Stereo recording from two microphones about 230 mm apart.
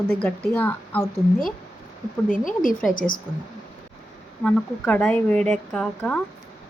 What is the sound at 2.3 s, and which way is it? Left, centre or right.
Speech, left.